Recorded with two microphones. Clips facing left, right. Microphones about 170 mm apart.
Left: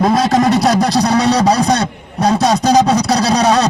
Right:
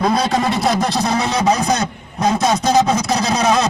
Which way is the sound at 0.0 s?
45° left (ahead or behind).